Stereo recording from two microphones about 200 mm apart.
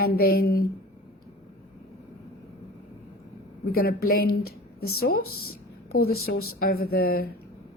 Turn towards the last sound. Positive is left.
turn(degrees=50)  # may be behind; listen again after turning